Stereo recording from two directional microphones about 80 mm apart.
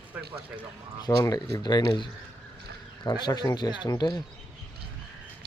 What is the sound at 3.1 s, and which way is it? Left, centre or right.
Speech, left.